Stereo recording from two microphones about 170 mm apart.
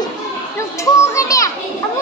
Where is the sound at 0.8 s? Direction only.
20° left (ahead or behind).